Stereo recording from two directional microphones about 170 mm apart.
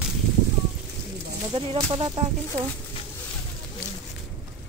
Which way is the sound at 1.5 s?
35° right (ahead or behind).